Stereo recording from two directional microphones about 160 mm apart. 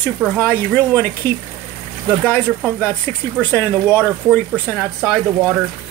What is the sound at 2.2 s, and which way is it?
Speech, 5° left (ahead or behind).